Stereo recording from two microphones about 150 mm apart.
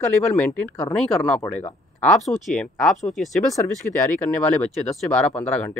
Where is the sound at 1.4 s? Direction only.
15° left (ahead or behind).